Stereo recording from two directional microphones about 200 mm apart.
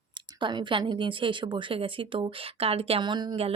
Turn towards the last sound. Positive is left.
turn(degrees=-25)  # may be behind; listen again after turning